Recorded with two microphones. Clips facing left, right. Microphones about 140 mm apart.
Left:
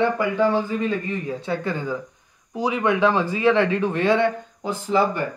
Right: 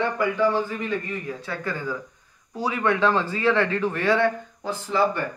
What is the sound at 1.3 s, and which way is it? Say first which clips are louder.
A man's voice: left 5 dB; 20° left (ahead or behind).